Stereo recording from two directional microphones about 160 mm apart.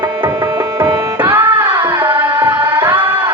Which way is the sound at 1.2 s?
10° right (ahead or behind).